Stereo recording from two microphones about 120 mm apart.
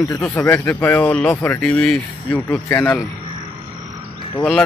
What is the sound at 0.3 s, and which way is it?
Speech, 15° left (ahead or behind).